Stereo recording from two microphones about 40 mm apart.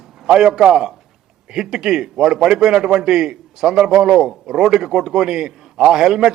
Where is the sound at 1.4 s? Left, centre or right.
Centre.